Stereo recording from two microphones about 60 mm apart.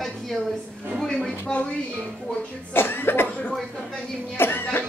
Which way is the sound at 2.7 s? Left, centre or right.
Left.